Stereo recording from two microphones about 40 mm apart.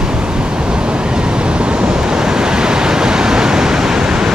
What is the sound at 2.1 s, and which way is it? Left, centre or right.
Waves, centre.